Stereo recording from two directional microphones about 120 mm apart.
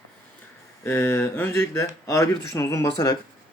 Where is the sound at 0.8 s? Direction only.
20° left (ahead or behind).